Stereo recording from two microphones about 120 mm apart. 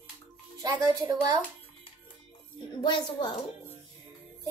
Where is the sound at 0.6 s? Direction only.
30° right (ahead or behind).